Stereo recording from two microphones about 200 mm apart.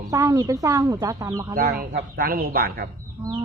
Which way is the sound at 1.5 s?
50° right (ahead or behind).